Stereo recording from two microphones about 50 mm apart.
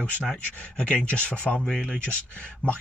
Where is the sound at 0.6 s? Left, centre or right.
Left.